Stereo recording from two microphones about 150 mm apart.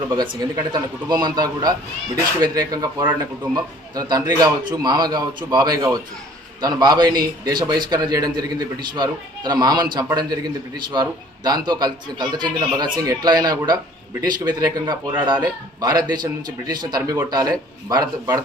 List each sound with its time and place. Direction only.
0.1 s a man's voice: 25° right (ahead or behind)